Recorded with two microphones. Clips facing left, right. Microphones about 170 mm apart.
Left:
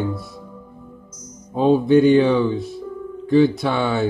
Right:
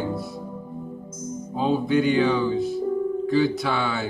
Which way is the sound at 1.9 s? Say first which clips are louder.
Left 8 dB; 35° left (ahead or behind).